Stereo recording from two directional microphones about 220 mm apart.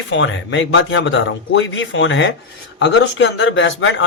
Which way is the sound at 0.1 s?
60° left (ahead or behind).